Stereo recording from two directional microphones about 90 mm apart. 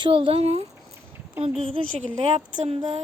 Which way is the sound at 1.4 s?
90° right.